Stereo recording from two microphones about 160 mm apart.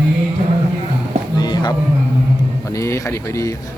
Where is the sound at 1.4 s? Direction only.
25° left (ahead or behind).